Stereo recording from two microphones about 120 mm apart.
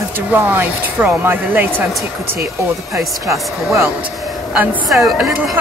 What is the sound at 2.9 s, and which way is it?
Speech, 25° right (ahead or behind).